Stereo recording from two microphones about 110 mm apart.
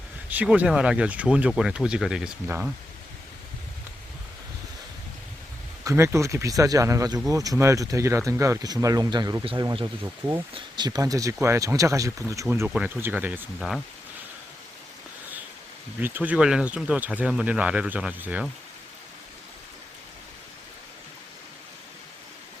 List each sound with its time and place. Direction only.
0.3 s speech: 15° right (ahead or behind)
5.8 s speech: 25° right (ahead or behind)
10.5 s speech: 40° right (ahead or behind)
12.6 s speech: 10° right (ahead or behind)
13.6 s speech: centre (ahead or behind)
16.0 s speech: 15° right (ahead or behind)